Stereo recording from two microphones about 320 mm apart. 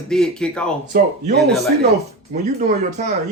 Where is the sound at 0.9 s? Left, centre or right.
Right.